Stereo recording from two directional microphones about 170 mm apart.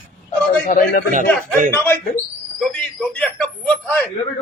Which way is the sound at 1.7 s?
15° left (ahead or behind).